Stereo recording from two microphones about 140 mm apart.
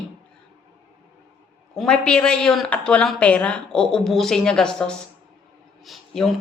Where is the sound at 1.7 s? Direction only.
5° left (ahead or behind).